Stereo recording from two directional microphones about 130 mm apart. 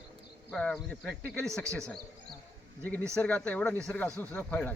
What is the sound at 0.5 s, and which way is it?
Speech, 5° left (ahead or behind).